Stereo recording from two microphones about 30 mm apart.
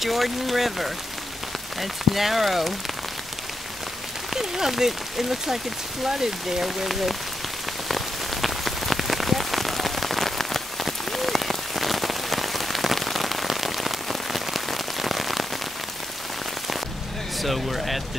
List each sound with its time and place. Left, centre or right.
0.0 s speech: centre
4.3 s speech: centre
7.9 s rain on surface: centre
17.4 s speech: centre